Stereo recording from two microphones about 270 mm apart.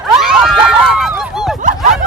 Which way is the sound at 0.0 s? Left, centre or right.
Centre.